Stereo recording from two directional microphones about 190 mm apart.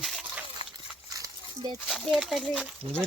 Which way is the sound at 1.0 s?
20° right (ahead or behind).